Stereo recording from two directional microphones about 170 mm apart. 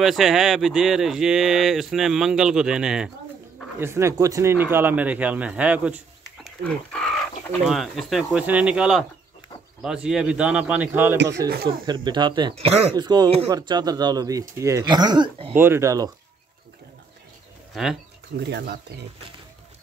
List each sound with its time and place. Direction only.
0.0 s speech: centre (ahead or behind)
3.8 s speech: 15° right (ahead or behind)
6.6 s speech: 5° left (ahead or behind); by 11.1 s 15° right (ahead or behind)
11.4 s speech: 65° right (ahead or behind)
11.8 s speech: 25° right (ahead or behind)
15.5 s speech: 15° right (ahead or behind)
17.8 s speech: centre (ahead or behind)
18.4 s speech: 80° right